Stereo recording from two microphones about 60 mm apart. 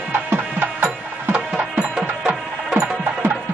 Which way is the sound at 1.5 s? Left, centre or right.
Centre.